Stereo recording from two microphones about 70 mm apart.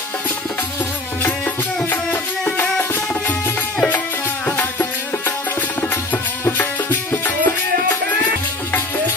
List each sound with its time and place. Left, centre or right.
2.5 s music: left
6.6 s music: left